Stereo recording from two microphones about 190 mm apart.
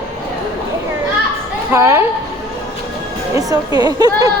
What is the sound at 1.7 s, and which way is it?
Speech, 15° right (ahead or behind).